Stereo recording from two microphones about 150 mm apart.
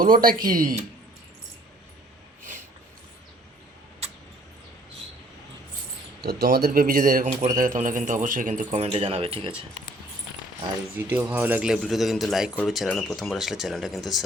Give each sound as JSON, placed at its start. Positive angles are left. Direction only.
{"t": 0.0, "sound": "speech", "side_deg": -70}
{"t": 6.2, "sound": "speech", "side_deg": -90}
{"t": 8.7, "sound": "speech", "side_deg": -40}
{"t": 10.9, "sound": "a man's voice", "side_deg": -10}